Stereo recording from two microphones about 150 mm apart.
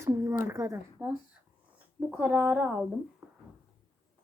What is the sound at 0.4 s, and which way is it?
Speech, 20° right (ahead or behind).